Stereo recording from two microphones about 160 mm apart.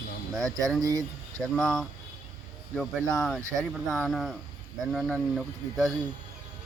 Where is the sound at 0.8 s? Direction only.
20° right (ahead or behind).